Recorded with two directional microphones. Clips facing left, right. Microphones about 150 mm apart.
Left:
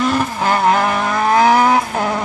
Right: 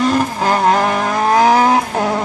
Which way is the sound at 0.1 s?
30° right (ahead or behind).